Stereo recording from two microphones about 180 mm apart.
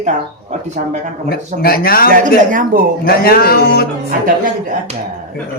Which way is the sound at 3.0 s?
55° left (ahead or behind).